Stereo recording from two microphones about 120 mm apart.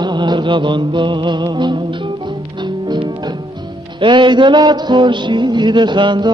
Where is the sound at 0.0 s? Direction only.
40° right (ahead or behind).